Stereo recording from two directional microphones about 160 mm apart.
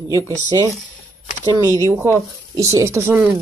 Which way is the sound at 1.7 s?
20° right (ahead or behind).